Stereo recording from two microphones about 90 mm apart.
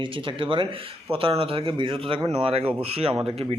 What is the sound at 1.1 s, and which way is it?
A man's voice, 90° right.